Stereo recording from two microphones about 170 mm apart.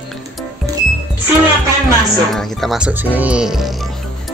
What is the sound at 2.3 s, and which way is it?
Speech, centre (ahead or behind).